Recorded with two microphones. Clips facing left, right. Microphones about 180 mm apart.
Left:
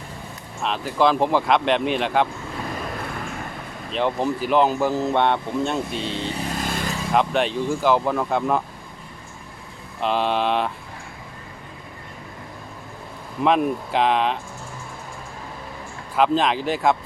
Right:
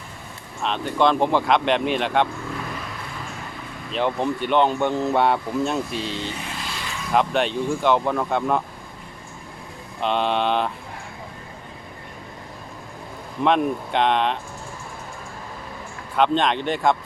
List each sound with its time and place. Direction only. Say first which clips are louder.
0.6 s speech: even; centre (ahead or behind)
3.9 s speech: even; centre (ahead or behind)
6.3 s vehicle: left 6 dB; 40° left (ahead or behind)
7.1 s speech: even; centre (ahead or behind)
10.0 s speech: even; centre (ahead or behind)
13.4 s speech: even; centre (ahead or behind)
16.1 s speech: even; 5° left (ahead or behind)